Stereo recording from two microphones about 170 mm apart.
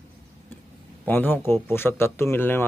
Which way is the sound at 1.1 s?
10° left (ahead or behind).